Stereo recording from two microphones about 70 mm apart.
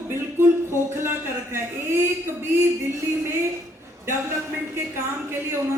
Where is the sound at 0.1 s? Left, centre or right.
Right.